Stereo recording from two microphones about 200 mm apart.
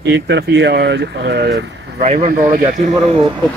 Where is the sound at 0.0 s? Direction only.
60° right (ahead or behind).